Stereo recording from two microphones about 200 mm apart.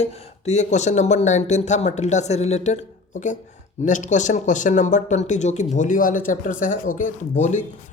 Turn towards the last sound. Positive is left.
turn(degrees=40)  # may be behind; listen again after turning